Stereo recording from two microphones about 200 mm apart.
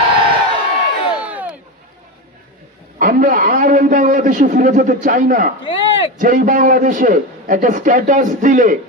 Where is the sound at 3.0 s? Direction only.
45° right (ahead or behind).